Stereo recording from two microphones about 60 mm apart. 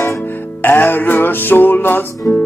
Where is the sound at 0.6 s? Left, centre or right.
Left.